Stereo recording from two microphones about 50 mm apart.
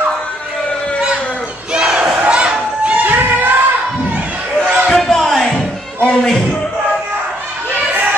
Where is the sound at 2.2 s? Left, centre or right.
Right.